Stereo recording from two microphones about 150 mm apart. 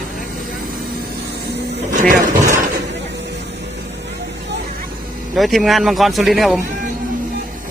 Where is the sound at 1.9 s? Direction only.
60° right (ahead or behind).